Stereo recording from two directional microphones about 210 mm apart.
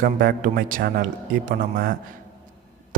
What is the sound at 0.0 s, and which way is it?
A man's voice, 40° right (ahead or behind).